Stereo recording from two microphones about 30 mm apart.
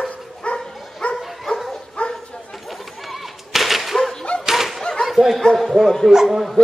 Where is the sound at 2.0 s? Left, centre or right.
Left.